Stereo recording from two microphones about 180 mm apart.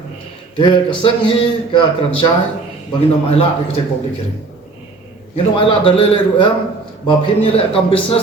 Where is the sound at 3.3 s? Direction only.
30° left (ahead or behind).